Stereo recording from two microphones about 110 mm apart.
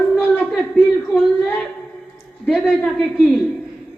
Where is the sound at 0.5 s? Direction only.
Centre (ahead or behind).